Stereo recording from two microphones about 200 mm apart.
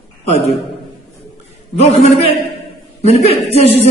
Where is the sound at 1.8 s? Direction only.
30° left (ahead or behind).